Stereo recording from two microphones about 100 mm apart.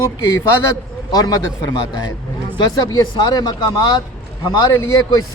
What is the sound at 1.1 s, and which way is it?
Speech, 40° left (ahead or behind).